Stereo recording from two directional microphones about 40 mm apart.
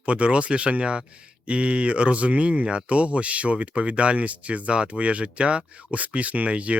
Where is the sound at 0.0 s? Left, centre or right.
Right.